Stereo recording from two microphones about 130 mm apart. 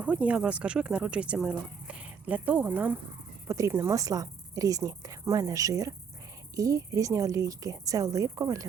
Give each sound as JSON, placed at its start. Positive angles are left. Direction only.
{"t": 0.0, "sound": "speech", "side_deg": -10}
{"t": 3.4, "sound": "a woman's voice", "side_deg": -25}